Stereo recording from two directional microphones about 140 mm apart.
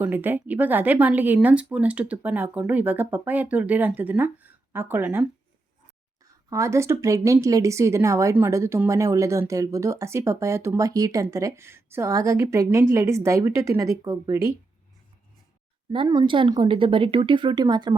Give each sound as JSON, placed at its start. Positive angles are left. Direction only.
{"t": 0.0, "sound": "speech", "side_deg": -15}
{"t": 6.5, "sound": "speech", "side_deg": -20}
{"t": 15.9, "sound": "a woman's voice", "side_deg": -35}